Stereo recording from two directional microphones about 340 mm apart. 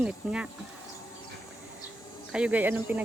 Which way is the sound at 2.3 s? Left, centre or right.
Centre.